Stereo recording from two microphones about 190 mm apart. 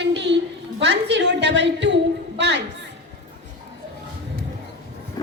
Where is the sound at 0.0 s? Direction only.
65° right (ahead or behind).